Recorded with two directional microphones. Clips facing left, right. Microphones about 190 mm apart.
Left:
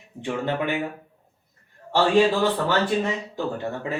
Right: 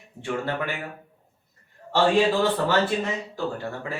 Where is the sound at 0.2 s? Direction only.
20° left (ahead or behind).